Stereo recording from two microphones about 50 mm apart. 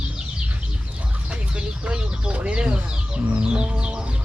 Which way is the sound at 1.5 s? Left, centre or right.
Centre.